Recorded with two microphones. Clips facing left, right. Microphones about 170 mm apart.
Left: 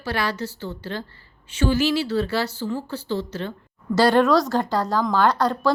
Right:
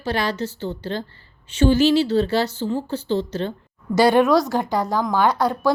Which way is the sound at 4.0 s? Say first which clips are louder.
Right 2 dB; 10° right (ahead or behind).